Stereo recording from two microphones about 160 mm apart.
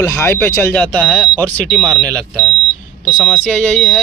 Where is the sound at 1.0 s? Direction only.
5° right (ahead or behind).